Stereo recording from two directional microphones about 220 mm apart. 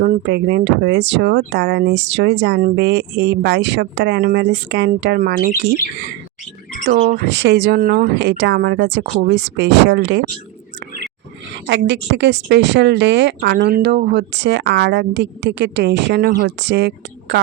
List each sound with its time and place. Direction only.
0.0 s speech: 50° right (ahead or behind)
7.1 s speech: 50° right (ahead or behind)
11.6 s speech: 55° right (ahead or behind)